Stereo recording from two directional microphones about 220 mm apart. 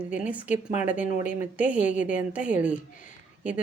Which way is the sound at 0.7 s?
35° left (ahead or behind).